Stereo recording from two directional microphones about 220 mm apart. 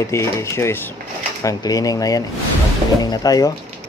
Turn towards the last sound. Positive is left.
turn(degrees=15)  # may be behind; listen again after turning